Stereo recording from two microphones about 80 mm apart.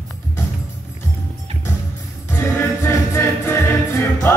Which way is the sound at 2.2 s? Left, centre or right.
Left.